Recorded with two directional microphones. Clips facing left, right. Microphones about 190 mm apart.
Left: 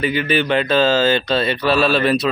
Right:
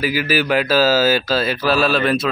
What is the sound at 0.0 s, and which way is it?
A man's voice, 5° right (ahead or behind).